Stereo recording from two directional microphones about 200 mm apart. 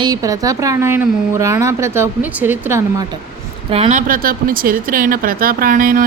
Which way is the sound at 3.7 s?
35° right (ahead or behind).